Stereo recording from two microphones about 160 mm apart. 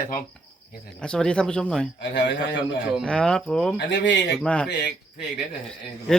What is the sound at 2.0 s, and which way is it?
Speech, 90° left.